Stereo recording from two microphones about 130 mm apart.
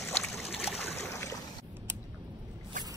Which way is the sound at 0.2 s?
Centre (ahead or behind).